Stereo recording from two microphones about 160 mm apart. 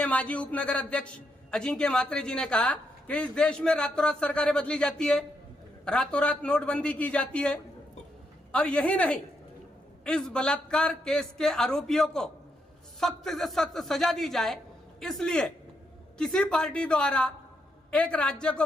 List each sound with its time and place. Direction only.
0.0 s a man's voice: 10° left (ahead or behind)